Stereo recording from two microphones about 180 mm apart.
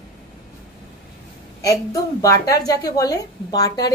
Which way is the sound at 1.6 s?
20° left (ahead or behind).